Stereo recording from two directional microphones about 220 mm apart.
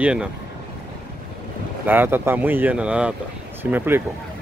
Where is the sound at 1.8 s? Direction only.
10° right (ahead or behind).